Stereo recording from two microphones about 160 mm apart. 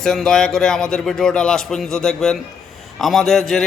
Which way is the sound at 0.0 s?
5° left (ahead or behind).